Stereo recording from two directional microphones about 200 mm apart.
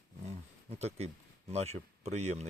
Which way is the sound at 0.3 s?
30° right (ahead or behind).